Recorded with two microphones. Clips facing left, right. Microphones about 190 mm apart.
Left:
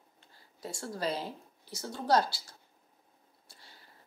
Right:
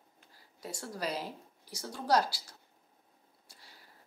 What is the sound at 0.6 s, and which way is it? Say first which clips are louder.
Speech: left 2 dB; 25° left (ahead or behind).